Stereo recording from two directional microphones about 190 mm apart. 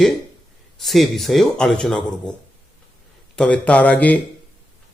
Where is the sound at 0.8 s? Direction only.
Centre (ahead or behind).